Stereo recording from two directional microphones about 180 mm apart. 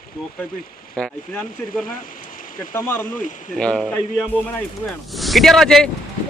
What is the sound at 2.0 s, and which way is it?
Rain, 50° left (ahead or behind).